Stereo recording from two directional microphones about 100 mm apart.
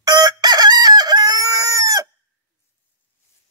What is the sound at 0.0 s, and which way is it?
Chicken, 45° right (ahead or behind).